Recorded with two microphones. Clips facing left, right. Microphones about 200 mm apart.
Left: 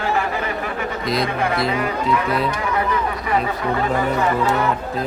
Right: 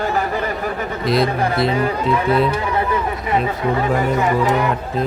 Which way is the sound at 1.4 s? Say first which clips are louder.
Right 3 dB; 35° right (ahead or behind).